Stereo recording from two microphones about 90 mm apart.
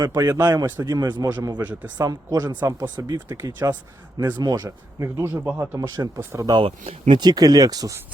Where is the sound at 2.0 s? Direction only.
50° right (ahead or behind).